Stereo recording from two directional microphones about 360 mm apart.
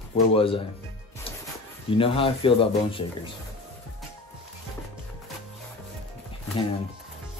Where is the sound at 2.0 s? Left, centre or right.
Centre.